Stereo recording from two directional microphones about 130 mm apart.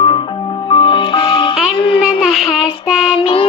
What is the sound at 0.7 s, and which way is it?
Music, 40° left (ahead or behind).